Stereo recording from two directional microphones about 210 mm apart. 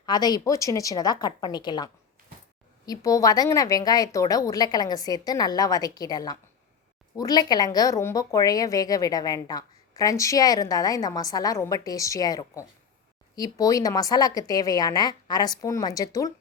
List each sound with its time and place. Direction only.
0.0 s a woman's voice: 20° left (ahead or behind)